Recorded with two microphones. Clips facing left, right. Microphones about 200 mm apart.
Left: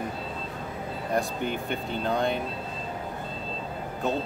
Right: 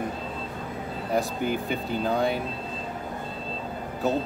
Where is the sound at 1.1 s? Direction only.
5° right (ahead or behind).